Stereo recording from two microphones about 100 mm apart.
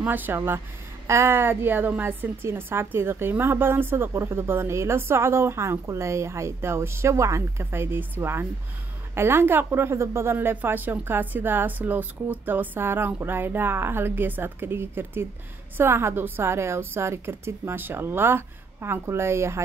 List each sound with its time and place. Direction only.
0.0 s a woman's voice: 20° right (ahead or behind)